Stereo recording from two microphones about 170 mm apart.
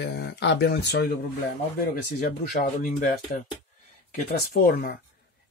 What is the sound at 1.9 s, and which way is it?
Speech, 55° left (ahead or behind).